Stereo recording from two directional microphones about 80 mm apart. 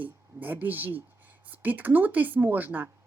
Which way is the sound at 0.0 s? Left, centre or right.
Right.